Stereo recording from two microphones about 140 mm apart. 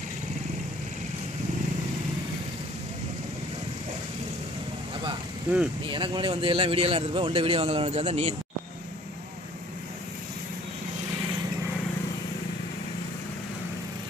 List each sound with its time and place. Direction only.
5.9 s a man's voice: 35° right (ahead or behind)